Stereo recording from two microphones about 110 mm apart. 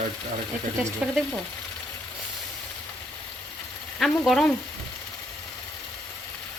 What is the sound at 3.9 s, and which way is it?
Speech, 5° left (ahead or behind).